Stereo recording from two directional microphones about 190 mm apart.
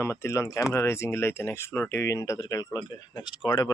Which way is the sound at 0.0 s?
15° left (ahead or behind).